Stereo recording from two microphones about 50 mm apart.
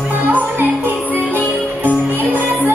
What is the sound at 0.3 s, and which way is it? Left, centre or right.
Music, right.